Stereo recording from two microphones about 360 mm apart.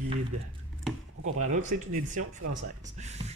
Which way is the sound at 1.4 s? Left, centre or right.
Right.